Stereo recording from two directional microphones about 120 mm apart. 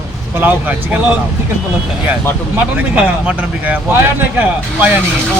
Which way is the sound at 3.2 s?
10° right (ahead or behind).